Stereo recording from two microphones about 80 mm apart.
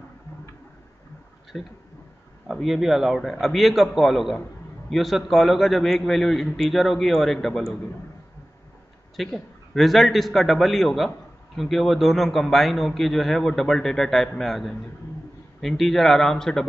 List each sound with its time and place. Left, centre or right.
1.5 s a man's voice: centre
9.1 s a man's voice: centre